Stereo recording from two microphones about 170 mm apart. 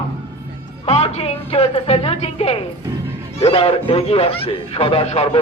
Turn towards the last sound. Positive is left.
turn(degrees=40)  # may be behind; listen again after turning